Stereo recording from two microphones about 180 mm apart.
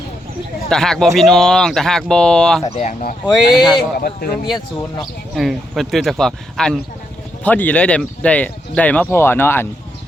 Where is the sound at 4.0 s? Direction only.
55° left (ahead or behind).